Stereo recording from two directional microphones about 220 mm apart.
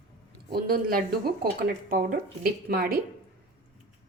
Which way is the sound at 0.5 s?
40° right (ahead or behind).